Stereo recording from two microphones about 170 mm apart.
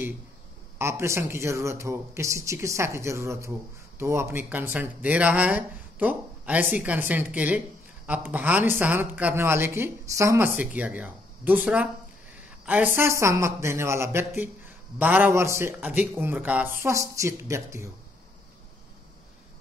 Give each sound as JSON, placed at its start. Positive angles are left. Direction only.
{"t": 0.7, "sound": "speech", "side_deg": -15}